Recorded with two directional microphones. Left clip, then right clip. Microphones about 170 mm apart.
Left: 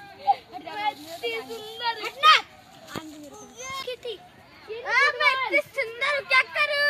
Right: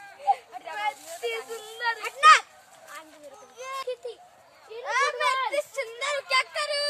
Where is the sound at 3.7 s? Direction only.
50° right (ahead or behind).